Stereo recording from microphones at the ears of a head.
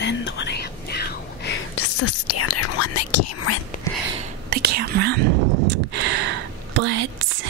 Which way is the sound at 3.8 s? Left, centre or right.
Right.